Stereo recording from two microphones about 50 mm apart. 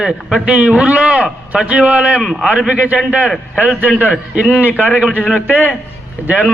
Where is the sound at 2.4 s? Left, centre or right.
Centre.